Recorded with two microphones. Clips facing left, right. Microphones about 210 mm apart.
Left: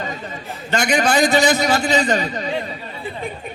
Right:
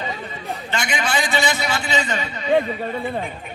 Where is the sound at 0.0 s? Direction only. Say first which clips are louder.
Left 1 dB; 45° left (ahead or behind).